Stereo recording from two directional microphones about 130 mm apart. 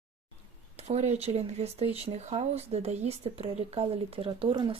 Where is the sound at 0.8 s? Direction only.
55° right (ahead or behind).